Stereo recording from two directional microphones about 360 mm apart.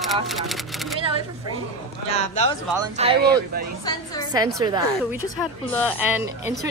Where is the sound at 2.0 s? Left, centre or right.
Centre.